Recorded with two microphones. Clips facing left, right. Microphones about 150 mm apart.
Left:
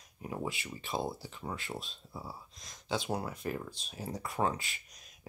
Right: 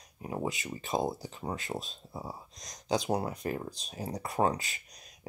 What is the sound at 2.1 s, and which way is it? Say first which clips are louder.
Speech: right 4 dB; 20° right (ahead or behind).